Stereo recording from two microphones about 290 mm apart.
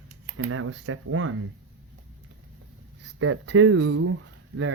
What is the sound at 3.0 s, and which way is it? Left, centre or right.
Speech, right.